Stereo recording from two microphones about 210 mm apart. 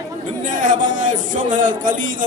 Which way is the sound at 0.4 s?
40° right (ahead or behind).